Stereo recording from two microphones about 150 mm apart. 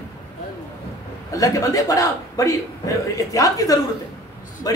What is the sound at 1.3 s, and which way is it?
A man's voice, 20° left (ahead or behind).